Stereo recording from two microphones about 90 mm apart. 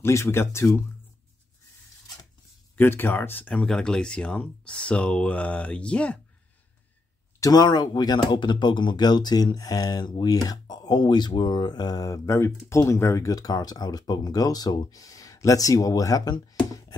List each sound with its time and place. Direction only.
0.0 s speech: 30° left (ahead or behind)
2.7 s speech: 25° left (ahead or behind)
7.3 s speech: 40° left (ahead or behind)
7.6 s speech: 55° left (ahead or behind)